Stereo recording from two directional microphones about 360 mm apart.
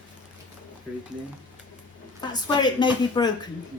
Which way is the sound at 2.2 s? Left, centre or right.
Centre.